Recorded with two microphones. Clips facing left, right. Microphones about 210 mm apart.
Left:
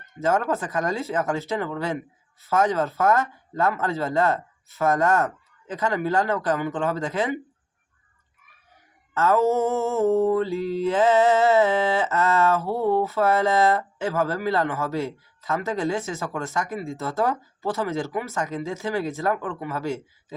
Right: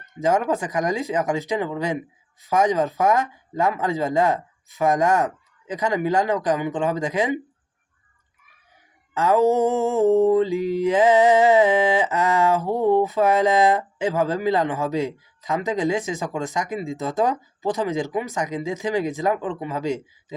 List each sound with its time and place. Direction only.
0.0 s mantra: 15° right (ahead or behind)
9.1 s mantra: 15° right (ahead or behind)